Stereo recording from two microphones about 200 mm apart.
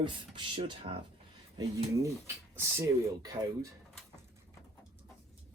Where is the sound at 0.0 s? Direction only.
25° right (ahead or behind).